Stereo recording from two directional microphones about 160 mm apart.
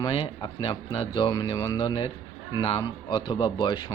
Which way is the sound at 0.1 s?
35° left (ahead or behind).